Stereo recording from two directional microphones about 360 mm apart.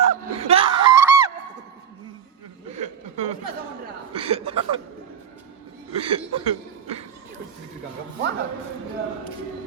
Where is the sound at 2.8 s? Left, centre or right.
Centre.